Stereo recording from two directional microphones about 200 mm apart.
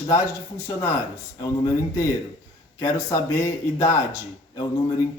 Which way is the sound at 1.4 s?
15° left (ahead or behind).